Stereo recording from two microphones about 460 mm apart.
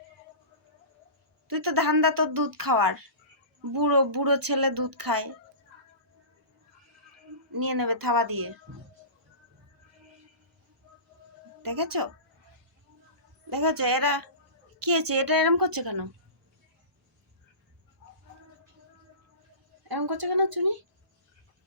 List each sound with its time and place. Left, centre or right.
1.5 s speech: right
7.5 s speech: right
11.6 s speech: right
13.5 s speech: right
19.9 s speech: right